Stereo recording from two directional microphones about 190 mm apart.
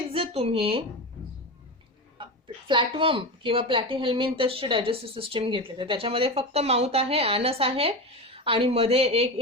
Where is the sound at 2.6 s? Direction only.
25° right (ahead or behind).